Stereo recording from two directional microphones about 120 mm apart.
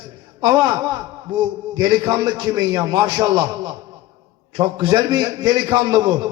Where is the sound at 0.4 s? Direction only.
30° right (ahead or behind).